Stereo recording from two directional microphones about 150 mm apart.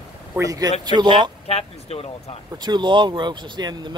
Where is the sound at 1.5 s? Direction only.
40° left (ahead or behind).